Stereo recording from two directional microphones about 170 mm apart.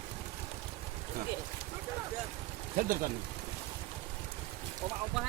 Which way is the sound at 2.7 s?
55° right (ahead or behind).